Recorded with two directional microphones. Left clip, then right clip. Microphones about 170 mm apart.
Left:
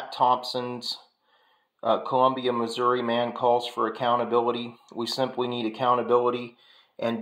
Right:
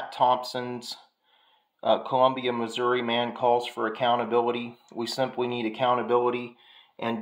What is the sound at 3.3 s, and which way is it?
Speech, 25° right (ahead or behind).